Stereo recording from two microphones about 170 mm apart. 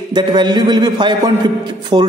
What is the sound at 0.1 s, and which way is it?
A man's voice, 25° right (ahead or behind).